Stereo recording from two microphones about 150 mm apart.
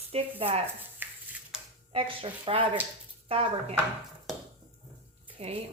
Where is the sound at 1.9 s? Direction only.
35° right (ahead or behind).